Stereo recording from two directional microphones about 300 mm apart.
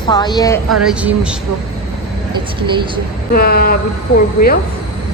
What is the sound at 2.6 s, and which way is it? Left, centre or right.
Speech, centre.